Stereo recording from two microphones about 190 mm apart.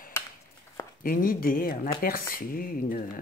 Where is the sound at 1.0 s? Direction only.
50° left (ahead or behind).